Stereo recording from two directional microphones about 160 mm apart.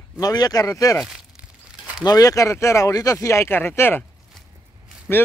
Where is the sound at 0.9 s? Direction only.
5° right (ahead or behind).